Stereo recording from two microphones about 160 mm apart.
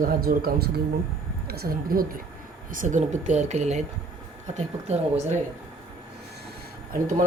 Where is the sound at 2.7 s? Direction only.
55° right (ahead or behind).